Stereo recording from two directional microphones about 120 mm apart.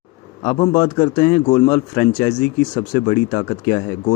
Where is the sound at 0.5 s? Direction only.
65° left (ahead or behind).